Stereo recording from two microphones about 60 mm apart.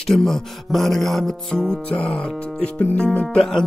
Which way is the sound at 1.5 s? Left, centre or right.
Centre.